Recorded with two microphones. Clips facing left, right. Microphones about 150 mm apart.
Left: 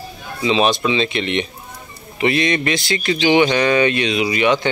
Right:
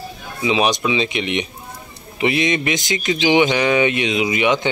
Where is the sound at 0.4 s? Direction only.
15° right (ahead or behind).